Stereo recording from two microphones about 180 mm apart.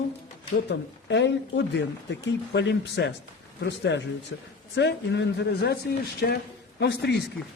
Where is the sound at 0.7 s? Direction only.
75° left (ahead or behind).